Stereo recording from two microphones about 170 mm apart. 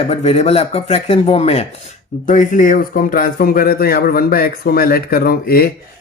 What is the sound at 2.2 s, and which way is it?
A man's voice, 50° left (ahead or behind).